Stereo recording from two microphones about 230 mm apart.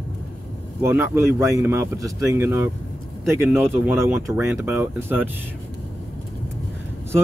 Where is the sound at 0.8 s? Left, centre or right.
Centre.